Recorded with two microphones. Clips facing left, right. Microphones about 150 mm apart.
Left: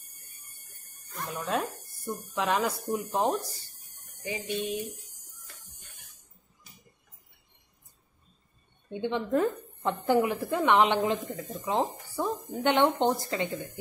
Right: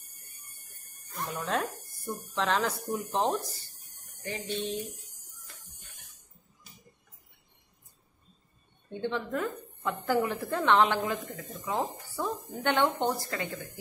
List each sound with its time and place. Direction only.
1.1 s a woman's voice: centre (ahead or behind)
8.9 s a woman's voice: 15° left (ahead or behind)
9.3 s a woman's voice: 30° left (ahead or behind)
10.1 s a woman's voice: 15° left (ahead or behind)